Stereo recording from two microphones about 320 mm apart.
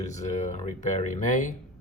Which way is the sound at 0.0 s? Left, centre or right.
Left.